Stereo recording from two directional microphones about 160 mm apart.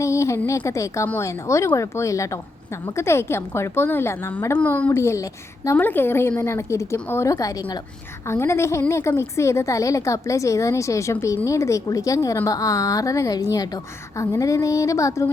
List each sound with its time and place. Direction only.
0.0 s a woman's voice: 20° left (ahead or behind)